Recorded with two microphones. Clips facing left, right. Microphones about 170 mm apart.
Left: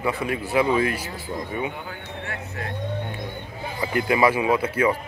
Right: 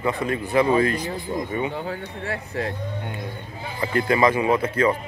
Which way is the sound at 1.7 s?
30° right (ahead or behind).